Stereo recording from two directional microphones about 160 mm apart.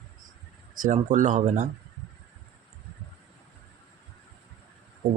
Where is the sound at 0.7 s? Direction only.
55° right (ahead or behind).